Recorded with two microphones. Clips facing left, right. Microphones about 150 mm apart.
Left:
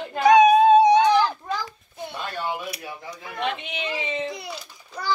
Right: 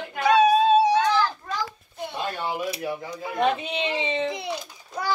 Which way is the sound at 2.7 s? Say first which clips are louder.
Right 6 dB; 25° right (ahead or behind).